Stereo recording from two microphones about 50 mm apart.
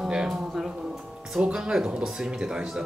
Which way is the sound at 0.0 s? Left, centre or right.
Centre.